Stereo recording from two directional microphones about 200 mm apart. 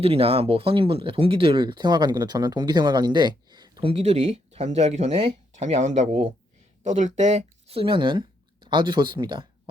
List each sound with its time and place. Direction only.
0.0 s speech: 30° right (ahead or behind)